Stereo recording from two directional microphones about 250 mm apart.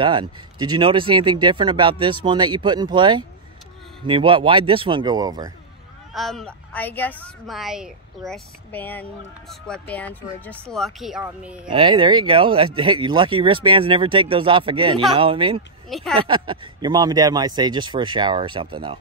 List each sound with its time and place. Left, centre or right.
0.0 s speech: centre
6.1 s speech: centre
11.7 s speech: centre
15.9 s speech: centre
16.2 s speech: centre